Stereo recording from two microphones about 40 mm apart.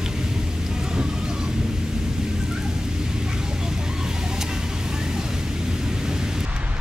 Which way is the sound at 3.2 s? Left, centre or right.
Centre.